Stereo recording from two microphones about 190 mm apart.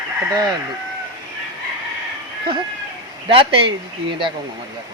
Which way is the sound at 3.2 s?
30° right (ahead or behind).